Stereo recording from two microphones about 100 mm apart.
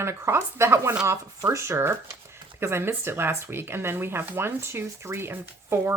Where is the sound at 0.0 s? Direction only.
25° right (ahead or behind).